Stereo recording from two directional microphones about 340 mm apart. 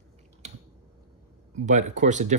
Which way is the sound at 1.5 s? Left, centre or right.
Right.